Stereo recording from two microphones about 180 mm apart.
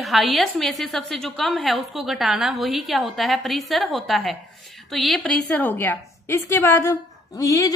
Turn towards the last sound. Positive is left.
turn(degrees=20)  # may be behind; listen again after turning